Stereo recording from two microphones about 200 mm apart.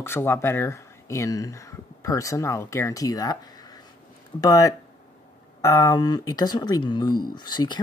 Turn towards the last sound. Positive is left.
turn(degrees=20)  # may be behind; listen again after turning